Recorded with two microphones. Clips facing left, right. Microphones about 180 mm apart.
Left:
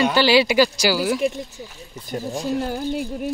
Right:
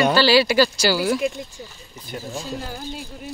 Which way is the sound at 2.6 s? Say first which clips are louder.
Left 8 dB; 55° left (ahead or behind).